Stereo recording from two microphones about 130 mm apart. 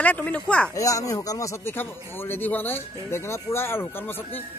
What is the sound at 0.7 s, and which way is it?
Speech, 25° left (ahead or behind).